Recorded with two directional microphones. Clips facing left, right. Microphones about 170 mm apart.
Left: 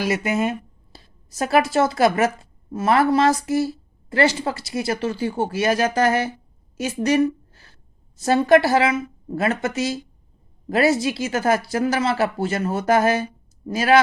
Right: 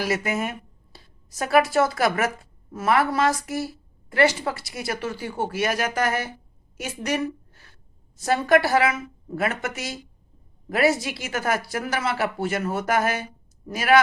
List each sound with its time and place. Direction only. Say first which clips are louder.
0.0 s a woman's voice: left 4 dB; 20° left (ahead or behind)